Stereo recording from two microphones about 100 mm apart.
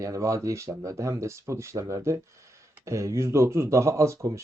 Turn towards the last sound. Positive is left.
turn(degrees=-30)  # may be behind; listen again after turning